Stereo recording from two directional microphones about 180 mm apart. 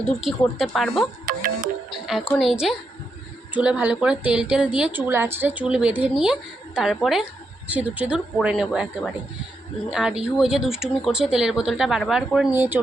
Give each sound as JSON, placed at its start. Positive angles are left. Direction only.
{"t": 0.0, "sound": "speech", "side_deg": 0}
{"t": 1.3, "sound": "music", "side_deg": -50}
{"t": 2.4, "sound": "speech", "side_deg": 0}